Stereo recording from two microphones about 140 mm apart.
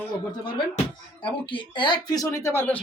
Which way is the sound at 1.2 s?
35° left (ahead or behind).